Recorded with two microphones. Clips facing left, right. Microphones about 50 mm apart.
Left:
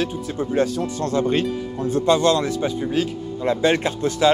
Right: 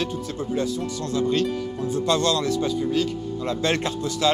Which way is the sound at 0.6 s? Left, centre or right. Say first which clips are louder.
Left 6 dB; left.